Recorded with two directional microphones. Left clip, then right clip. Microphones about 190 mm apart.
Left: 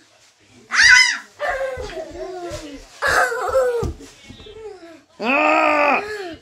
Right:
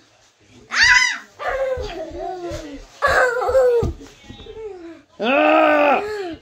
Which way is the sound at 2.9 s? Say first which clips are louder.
Right 1 dB; 20° left (ahead or behind).